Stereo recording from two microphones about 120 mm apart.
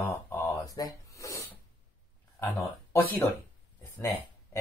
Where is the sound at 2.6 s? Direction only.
25° left (ahead or behind).